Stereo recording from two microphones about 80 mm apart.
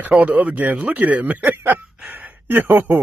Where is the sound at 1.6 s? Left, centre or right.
Right.